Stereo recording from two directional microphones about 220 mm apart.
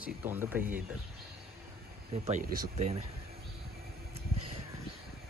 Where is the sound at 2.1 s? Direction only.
35° right (ahead or behind).